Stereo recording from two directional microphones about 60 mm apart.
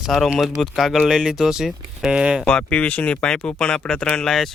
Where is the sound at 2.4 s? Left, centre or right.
Centre.